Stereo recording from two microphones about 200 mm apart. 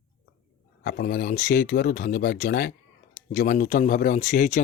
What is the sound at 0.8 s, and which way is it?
Speech, 45° left (ahead or behind).